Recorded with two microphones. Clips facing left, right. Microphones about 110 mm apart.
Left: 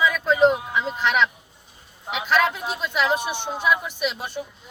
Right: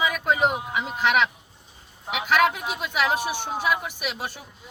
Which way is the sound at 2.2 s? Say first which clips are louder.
Even; 15° right (ahead or behind).